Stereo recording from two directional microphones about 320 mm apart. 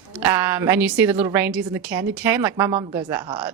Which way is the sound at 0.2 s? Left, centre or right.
Centre.